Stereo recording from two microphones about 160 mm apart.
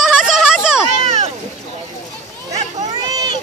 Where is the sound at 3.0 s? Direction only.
25° right (ahead or behind).